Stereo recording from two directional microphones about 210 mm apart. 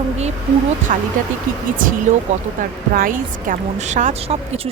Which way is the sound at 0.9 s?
35° right (ahead or behind).